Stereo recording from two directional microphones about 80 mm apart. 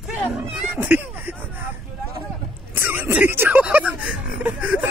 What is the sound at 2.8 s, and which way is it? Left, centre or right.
Speech, right.